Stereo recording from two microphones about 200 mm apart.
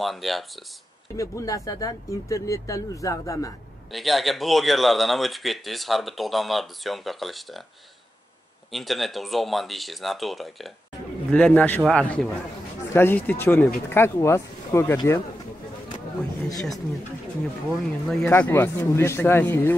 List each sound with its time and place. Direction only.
0.0 s speech: centre (ahead or behind)
1.1 s speech: 15° left (ahead or behind)
3.9 s speech: centre (ahead or behind)
8.7 s speech: centre (ahead or behind)
16.5 s speech: centre (ahead or behind)